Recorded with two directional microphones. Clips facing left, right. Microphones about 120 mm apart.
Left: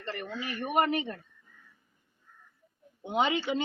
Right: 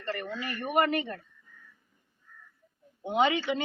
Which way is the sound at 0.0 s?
20° left (ahead or behind).